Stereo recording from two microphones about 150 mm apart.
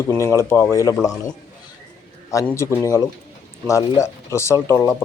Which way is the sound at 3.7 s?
20° left (ahead or behind).